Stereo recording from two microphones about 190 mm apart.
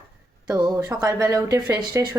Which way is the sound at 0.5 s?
20° right (ahead or behind).